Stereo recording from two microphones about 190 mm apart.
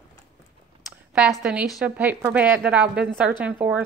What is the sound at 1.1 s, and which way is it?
A woman's voice, 5° right (ahead or behind).